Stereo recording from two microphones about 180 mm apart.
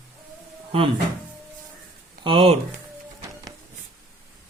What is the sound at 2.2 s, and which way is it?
Speech, 30° right (ahead or behind).